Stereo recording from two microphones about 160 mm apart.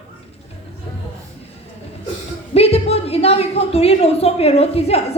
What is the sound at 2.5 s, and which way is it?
A woman's voice, 40° left (ahead or behind).